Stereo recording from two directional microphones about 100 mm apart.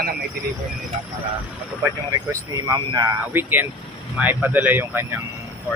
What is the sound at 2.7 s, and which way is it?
Speech, 45° right (ahead or behind).